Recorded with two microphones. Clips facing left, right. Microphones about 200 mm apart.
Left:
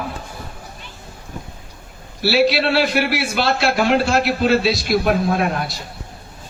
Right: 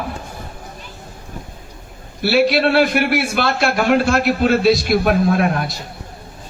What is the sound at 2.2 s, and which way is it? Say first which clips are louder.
A man's voice: right 2 dB; 50° right (ahead or behind).